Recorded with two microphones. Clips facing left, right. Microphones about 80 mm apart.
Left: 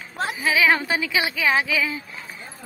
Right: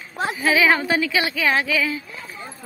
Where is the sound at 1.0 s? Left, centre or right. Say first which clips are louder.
Right 1 dB; centre.